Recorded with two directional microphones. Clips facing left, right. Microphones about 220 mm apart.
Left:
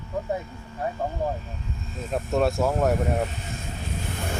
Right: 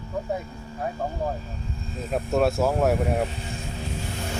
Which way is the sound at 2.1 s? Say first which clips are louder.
Right 1 dB; centre (ahead or behind).